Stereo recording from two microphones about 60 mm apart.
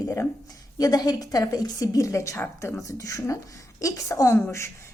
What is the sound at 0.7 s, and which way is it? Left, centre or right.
A woman's voice, left.